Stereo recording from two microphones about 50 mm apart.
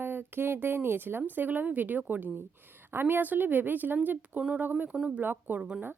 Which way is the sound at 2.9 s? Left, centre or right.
Right.